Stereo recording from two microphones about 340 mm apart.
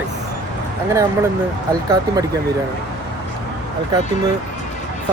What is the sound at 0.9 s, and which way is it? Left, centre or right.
Speech, centre.